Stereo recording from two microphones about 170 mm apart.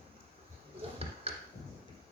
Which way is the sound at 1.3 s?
35° right (ahead or behind).